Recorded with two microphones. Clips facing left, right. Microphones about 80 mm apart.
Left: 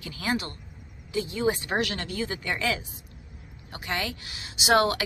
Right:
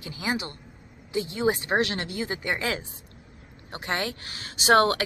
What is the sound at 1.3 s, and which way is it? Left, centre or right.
Speech, right.